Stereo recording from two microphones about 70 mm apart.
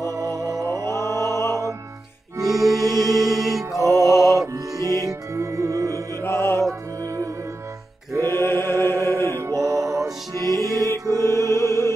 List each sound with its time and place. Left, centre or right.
0.0 s music: right
1.2 s music: left
2.3 s music: right
3.3 s mantra: centre
3.7 s music: right
6.2 s music: left
8.2 s mantra: left
9.3 s music: right
11.3 s music: left